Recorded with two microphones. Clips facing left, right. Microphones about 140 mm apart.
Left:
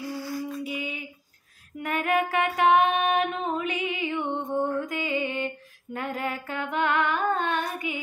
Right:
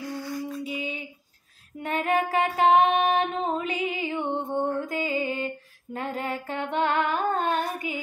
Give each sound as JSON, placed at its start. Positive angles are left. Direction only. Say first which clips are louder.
{"t": 0.1, "sound": "music", "louder": "even", "side_deg": 5}
{"t": 0.7, "sound": "a sound", "louder": "right 1 dB", "side_deg": -35}
{"t": 1.8, "sound": "music", "louder": "even", "side_deg": -30}
{"t": 5.9, "sound": "female singing", "louder": "even", "side_deg": -30}